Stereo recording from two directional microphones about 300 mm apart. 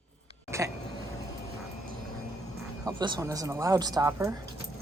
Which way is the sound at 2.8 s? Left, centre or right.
Centre.